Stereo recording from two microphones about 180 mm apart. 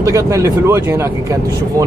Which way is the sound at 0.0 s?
15° right (ahead or behind).